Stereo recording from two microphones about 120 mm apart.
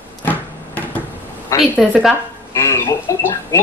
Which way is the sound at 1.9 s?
5° right (ahead or behind).